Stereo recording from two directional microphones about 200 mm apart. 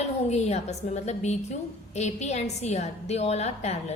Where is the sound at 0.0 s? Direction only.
35° left (ahead or behind).